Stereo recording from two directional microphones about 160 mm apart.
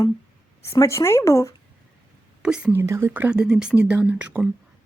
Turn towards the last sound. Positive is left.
turn(degrees=-10)  # may be behind; listen again after turning